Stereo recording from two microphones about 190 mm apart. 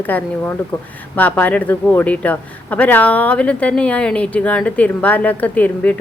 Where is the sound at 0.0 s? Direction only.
10° left (ahead or behind).